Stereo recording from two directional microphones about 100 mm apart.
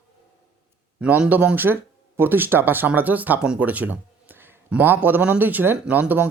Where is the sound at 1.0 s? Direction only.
15° right (ahead or behind).